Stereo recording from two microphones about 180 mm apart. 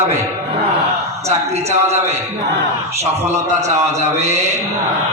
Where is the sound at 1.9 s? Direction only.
35° right (ahead or behind).